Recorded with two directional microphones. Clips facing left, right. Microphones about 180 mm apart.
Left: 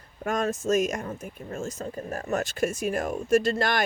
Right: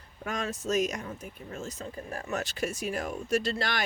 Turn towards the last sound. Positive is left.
turn(degrees=50)  # may be behind; listen again after turning